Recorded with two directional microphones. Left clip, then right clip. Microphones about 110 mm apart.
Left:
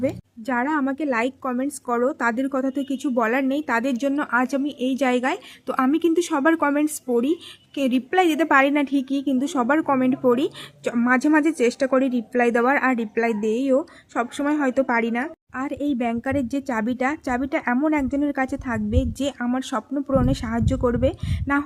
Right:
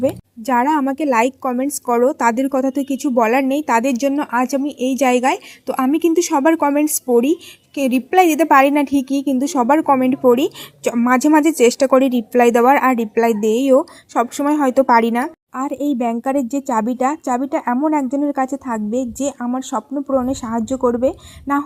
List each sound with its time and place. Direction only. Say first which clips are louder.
0.0 s a woman's voice: right 6 dB; 30° right (ahead or behind)
15.5 s a woman's voice: right 5 dB; 25° right (ahead or behind)
19.9 s speech: right 4 dB; 15° left (ahead or behind)
20.1 s a woman's voice: right 3 dB; 5° right (ahead or behind)
20.7 s speech: right 6 dB; 15° left (ahead or behind)
21.0 s a woman's voice: right 5 dB; 10° right (ahead or behind)